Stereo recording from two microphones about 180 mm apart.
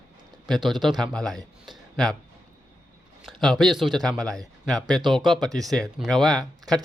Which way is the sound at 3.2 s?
Centre (ahead or behind).